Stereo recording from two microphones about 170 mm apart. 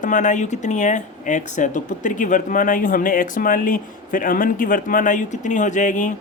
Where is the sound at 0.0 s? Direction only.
50° left (ahead or behind).